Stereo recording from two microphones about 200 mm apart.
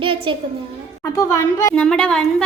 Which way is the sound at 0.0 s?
25° right (ahead or behind).